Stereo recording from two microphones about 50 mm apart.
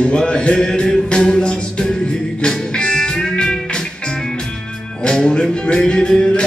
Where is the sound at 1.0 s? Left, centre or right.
Left.